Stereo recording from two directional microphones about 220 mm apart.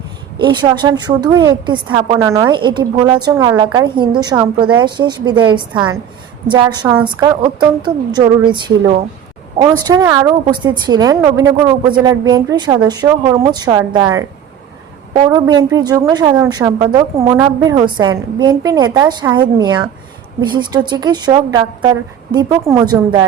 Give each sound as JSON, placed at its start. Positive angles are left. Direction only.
{"t": 0.3, "sound": "a woman's voice", "side_deg": -20}
{"t": 15.3, "sound": "a woman's voice", "side_deg": -15}